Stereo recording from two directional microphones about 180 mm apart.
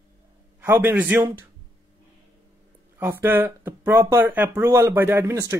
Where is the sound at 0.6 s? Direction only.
10° right (ahead or behind).